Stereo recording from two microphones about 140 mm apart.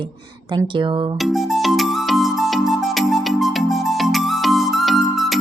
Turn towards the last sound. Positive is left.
turn(degrees=0)  # may be behind; listen again after turning